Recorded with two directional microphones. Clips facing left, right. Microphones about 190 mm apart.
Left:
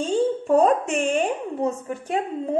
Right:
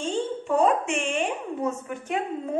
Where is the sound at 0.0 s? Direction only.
40° left (ahead or behind).